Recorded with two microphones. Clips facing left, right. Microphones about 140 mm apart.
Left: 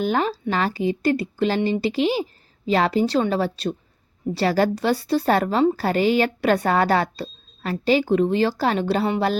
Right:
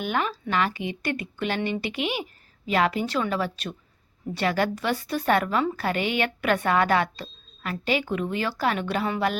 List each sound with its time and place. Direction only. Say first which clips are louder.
0.0 s a woman's voice: left 5 dB; 35° left (ahead or behind)